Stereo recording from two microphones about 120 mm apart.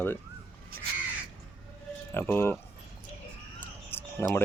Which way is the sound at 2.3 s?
20° left (ahead or behind).